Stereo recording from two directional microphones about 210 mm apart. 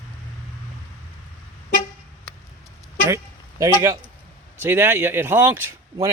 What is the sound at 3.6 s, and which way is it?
Speech, 15° right (ahead or behind).